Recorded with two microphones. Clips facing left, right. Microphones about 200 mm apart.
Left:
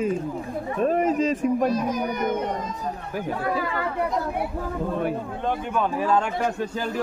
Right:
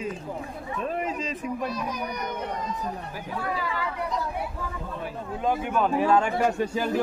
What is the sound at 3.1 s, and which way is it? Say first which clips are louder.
Speech: left 8 dB; 55° left (ahead or behind).